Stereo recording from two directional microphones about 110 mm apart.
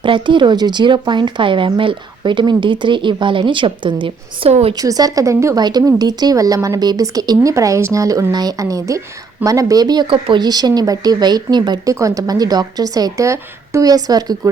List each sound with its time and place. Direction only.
0.0 s speech: 45° right (ahead or behind)
4.4 s a woman's voice: 65° right (ahead or behind)
4.7 s a woman's voice: 35° right (ahead or behind)
5.6 s a woman's voice: 40° right (ahead or behind)
10.1 s a woman's voice: 50° right (ahead or behind)
11.9 s a woman's voice: 30° right (ahead or behind)